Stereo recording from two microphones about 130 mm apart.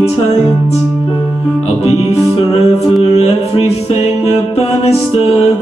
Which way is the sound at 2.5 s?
55° left (ahead or behind).